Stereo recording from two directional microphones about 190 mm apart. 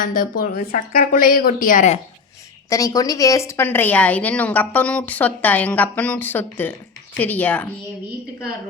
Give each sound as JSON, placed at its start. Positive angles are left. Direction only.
{"t": 0.0, "sound": "a woman's voice", "side_deg": 45}
{"t": 2.6, "sound": "a woman's voice", "side_deg": 15}